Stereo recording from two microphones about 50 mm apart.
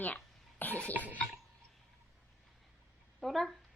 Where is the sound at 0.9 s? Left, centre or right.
Right.